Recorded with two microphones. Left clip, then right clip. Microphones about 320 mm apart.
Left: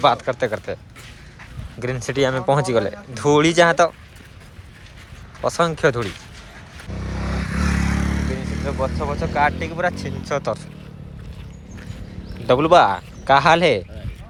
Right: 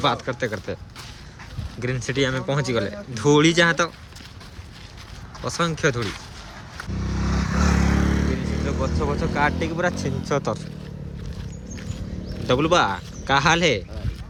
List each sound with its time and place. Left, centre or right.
0.0 s speech: centre
1.8 s speech: centre
5.5 s speech: centre
6.9 s vehicle: centre
8.3 s vehicle: right
8.6 s speech: centre
12.5 s speech: centre